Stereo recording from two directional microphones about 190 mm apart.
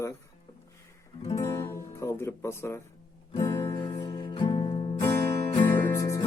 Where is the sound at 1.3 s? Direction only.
15° left (ahead or behind).